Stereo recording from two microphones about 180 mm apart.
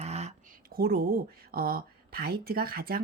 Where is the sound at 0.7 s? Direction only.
60° right (ahead or behind).